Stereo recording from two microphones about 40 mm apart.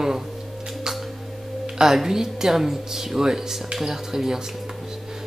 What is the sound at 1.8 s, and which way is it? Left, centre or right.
Speech, centre.